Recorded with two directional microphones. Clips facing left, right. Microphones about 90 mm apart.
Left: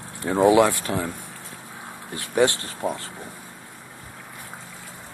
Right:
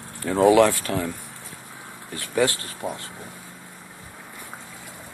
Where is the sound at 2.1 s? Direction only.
25° left (ahead or behind).